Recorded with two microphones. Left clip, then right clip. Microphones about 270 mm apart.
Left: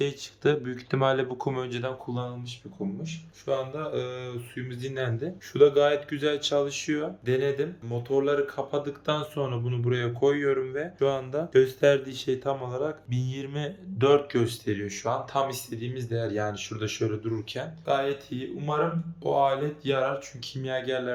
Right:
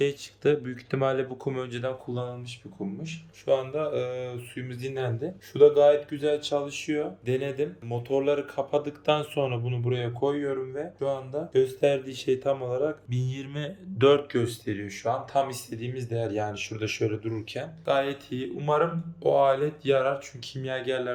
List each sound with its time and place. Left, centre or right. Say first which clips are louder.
0.0 s speech: right 1 dB; centre